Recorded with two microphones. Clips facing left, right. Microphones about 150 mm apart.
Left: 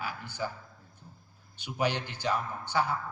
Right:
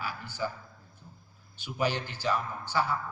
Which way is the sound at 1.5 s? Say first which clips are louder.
Even; 20° left (ahead or behind).